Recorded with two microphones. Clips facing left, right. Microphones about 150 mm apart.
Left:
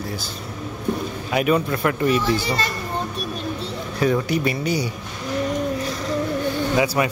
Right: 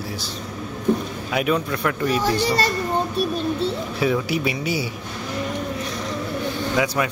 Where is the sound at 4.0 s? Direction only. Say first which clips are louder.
Left 2 dB; 5° right (ahead or behind).